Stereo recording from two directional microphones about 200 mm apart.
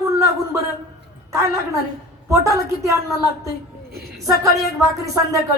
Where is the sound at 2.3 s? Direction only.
15° right (ahead or behind).